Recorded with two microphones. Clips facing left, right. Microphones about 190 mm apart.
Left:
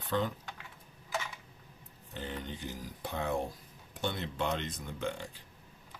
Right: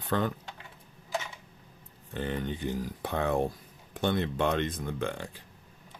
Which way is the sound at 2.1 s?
60° right (ahead or behind).